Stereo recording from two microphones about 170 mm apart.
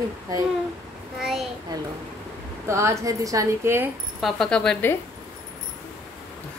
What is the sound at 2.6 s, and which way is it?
A woman's voice, 15° right (ahead or behind).